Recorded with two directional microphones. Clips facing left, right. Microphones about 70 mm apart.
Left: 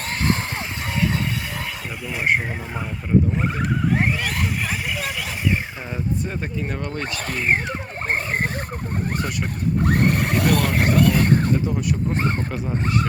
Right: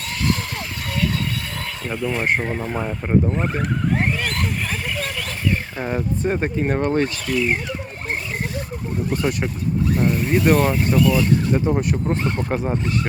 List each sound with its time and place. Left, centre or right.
1.9 s speech: centre
3.3 s a sound: centre
5.8 s speech: right
7.0 s speech: left
8.1 s a sound: left
9.8 s speech: left
11.5 s speech: right